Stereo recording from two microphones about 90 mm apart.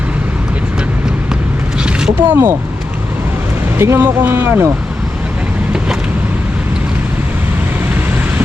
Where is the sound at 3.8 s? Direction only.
25° right (ahead or behind).